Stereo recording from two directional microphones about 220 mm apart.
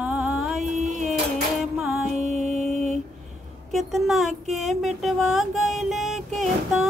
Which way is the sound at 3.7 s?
Centre (ahead or behind).